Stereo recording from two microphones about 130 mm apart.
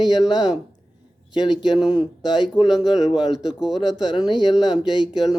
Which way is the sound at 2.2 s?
35° left (ahead or behind).